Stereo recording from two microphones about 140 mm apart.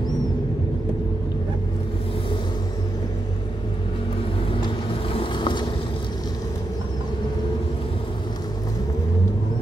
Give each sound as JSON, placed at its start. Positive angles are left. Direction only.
{"t": 5.1, "sound": "vehicle", "side_deg": 35}